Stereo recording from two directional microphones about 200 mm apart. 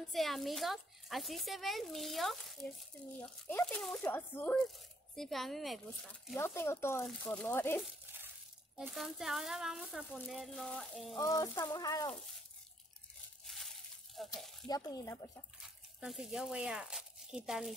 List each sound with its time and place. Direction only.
0.1 s a child's voice: centre (ahead or behind)
6.3 s speech: 10° left (ahead or behind)
8.7 s a child's voice: centre (ahead or behind)
11.1 s speech: 15° left (ahead or behind)
14.2 s a child's voice: centre (ahead or behind)
14.7 s speech: 20° left (ahead or behind)
15.6 s speech: 5° right (ahead or behind)